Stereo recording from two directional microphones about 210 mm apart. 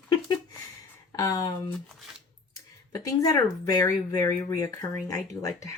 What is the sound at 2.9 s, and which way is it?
Speech, 15° left (ahead or behind).